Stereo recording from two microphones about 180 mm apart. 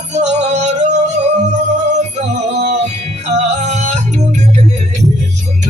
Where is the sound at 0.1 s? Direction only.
40° right (ahead or behind).